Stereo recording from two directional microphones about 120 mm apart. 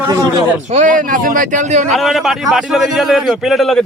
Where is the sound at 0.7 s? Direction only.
85° right.